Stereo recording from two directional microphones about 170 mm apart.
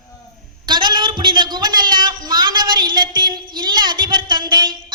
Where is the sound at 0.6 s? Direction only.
25° right (ahead or behind).